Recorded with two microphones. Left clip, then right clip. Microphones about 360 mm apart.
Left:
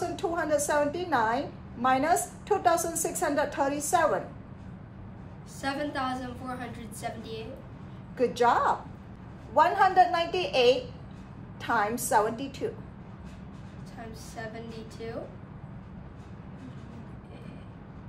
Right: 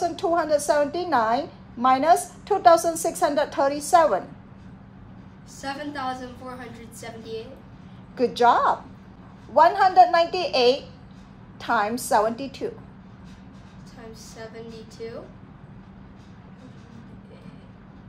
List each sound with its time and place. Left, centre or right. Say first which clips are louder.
0.1 s a woman's voice: right 6 dB; right
5.6 s a woman's voice: even; centre
8.2 s a woman's voice: right 5 dB; right